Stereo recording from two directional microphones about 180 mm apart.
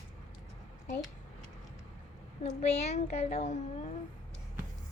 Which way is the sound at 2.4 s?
35° left (ahead or behind).